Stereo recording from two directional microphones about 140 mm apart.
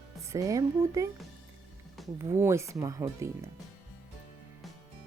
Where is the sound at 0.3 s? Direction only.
25° right (ahead or behind).